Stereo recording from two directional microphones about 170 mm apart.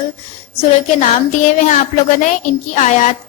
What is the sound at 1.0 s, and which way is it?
Speech, 45° left (ahead or behind).